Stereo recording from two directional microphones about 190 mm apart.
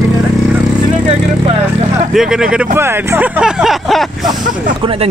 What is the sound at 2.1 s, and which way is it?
Speech, 5° right (ahead or behind).